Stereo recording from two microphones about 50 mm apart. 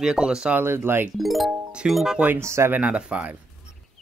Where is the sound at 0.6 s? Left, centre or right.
Right.